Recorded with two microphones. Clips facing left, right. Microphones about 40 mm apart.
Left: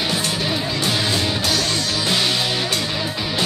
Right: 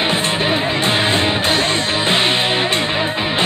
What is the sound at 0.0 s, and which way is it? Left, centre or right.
Music, right.